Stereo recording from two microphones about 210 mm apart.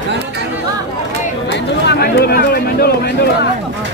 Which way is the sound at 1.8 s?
50° left (ahead or behind).